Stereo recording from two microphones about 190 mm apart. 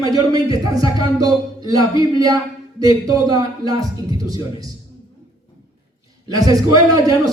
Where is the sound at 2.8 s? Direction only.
20° right (ahead or behind).